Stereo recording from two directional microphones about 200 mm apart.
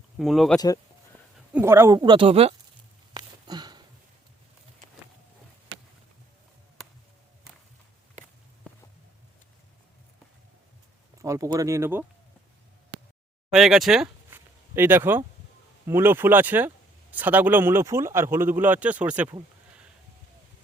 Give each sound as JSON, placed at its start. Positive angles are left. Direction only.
{"t": 0.2, "sound": "speech", "side_deg": 0}
{"t": 1.5, "sound": "speech", "side_deg": -10}
{"t": 3.2, "sound": "a sound", "side_deg": -20}
{"t": 11.2, "sound": "speech", "side_deg": -15}
{"t": 13.5, "sound": "speech", "side_deg": 0}